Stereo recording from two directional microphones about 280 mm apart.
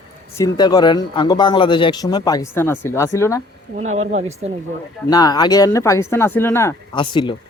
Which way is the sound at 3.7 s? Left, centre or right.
Right.